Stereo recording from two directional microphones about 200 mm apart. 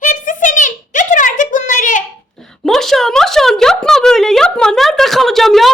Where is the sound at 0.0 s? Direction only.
40° left (ahead or behind).